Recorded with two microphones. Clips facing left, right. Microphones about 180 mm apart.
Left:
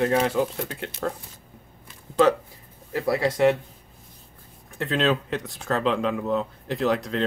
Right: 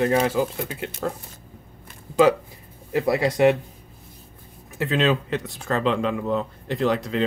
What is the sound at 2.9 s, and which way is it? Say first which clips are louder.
Speech: right 2 dB; 15° right (ahead or behind).